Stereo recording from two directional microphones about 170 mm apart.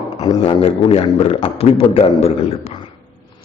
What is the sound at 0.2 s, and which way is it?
A man's voice, 25° left (ahead or behind).